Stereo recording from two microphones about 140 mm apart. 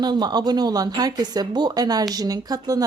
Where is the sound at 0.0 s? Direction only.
30° right (ahead or behind).